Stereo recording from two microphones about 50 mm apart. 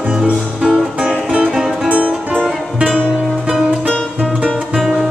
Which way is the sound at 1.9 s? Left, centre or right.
Right.